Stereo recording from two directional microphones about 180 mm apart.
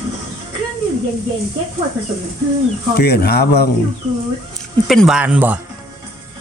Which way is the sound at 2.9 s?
65° left (ahead or behind).